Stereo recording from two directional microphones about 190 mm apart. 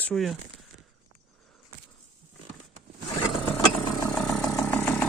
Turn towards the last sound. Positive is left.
turn(degrees=10)  # may be behind; listen again after turning